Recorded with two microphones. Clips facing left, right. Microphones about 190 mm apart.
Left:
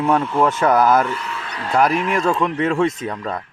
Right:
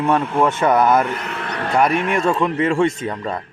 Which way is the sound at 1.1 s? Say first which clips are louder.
Right 3 dB; 60° right (ahead or behind).